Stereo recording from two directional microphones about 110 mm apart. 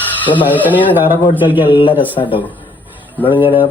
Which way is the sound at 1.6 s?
50° left (ahead or behind).